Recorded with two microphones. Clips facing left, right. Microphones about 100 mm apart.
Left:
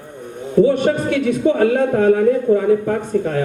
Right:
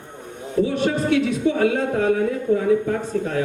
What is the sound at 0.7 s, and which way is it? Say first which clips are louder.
A man's voice: left 4 dB; 50° left (ahead or behind).